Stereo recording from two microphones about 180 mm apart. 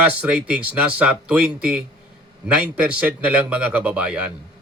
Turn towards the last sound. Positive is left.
turn(degrees=-5)  # may be behind; listen again after turning